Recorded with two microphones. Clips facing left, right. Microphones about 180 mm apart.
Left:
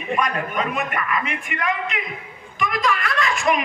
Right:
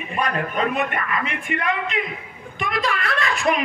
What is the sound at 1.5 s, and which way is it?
A woman's voice, 30° right (ahead or behind).